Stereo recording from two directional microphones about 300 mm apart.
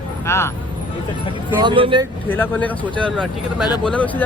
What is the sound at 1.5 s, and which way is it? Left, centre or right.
Speech, centre.